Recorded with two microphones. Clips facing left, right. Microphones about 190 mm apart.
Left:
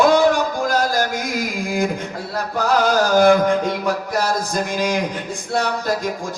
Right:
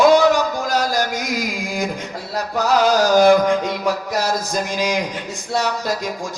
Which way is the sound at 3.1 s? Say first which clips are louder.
Even; 55° left (ahead or behind).